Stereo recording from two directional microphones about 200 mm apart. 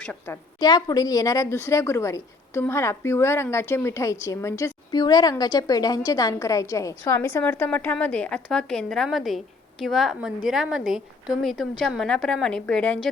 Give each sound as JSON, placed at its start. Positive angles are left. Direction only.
{"t": 0.0, "sound": "speech", "side_deg": 5}
{"t": 0.6, "sound": "a woman's voice", "side_deg": 20}